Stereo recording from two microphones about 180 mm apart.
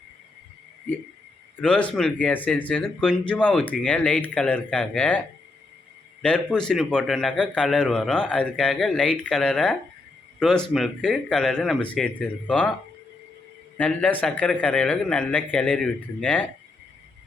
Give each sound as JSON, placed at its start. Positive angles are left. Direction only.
{"t": 1.6, "sound": "speech", "side_deg": 5}
{"t": 6.2, "sound": "a man's voice", "side_deg": 5}
{"t": 13.7, "sound": "speech", "side_deg": 10}